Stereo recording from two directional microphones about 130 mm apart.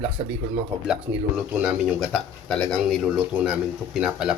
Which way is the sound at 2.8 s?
5° right (ahead or behind).